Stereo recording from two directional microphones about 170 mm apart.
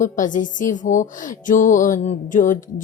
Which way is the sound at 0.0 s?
50° left (ahead or behind).